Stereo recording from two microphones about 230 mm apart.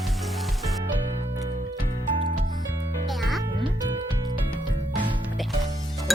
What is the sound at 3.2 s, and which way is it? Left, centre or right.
Music, centre.